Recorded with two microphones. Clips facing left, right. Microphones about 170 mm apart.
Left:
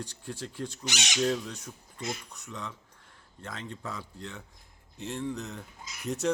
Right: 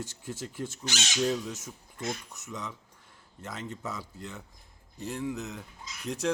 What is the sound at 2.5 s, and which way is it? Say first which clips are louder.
Speech: right 1 dB; centre (ahead or behind).